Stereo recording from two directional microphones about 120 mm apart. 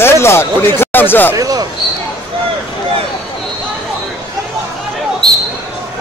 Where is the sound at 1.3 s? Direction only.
30° right (ahead or behind).